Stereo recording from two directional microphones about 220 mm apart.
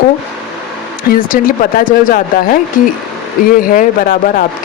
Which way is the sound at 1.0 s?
40° left (ahead or behind).